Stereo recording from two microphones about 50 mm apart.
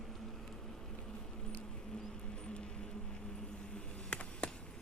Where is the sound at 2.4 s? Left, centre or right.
Centre.